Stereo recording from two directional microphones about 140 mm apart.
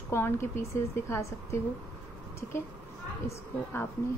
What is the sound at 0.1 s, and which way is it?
A woman's voice, 20° left (ahead or behind).